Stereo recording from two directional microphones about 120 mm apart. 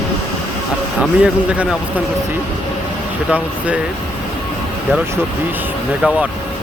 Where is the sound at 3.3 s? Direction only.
10° right (ahead or behind).